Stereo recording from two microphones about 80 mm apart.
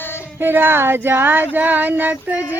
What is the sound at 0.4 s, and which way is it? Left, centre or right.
Child singing, right.